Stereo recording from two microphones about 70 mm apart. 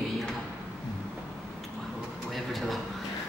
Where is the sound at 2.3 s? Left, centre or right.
Centre.